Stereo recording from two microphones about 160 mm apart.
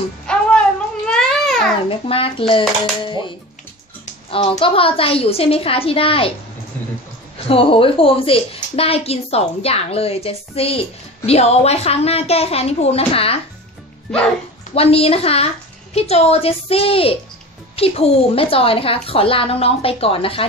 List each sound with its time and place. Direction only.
0.3 s a sound: 5° left (ahead or behind)
1.9 s a woman's voice: 35° left (ahead or behind)
7.4 s a woman's voice: 35° left (ahead or behind)
14.7 s a woman's voice: 40° left (ahead or behind)